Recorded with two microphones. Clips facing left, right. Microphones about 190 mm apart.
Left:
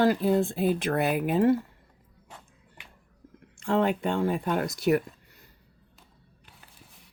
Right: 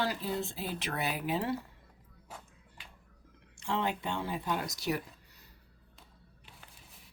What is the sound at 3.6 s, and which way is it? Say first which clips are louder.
Speech: left 9 dB; 55° left (ahead or behind).